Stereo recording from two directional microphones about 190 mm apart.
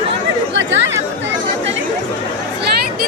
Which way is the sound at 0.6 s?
75° right (ahead or behind).